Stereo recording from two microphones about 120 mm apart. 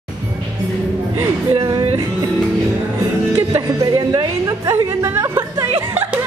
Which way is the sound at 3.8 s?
35° right (ahead or behind).